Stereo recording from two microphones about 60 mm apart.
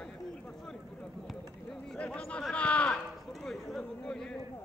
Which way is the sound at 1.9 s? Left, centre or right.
Centre.